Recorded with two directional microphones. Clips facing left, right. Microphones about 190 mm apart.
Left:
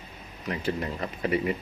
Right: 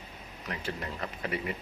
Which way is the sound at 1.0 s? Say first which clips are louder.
Left 7 dB; 25° left (ahead or behind).